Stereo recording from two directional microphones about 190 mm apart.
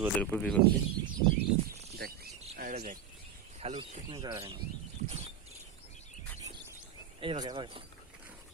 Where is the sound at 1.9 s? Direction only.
55° right (ahead or behind).